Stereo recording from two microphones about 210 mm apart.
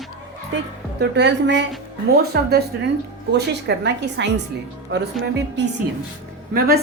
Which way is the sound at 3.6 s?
55° right (ahead or behind).